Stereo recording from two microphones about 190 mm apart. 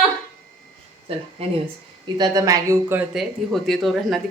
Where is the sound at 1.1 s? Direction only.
30° right (ahead or behind).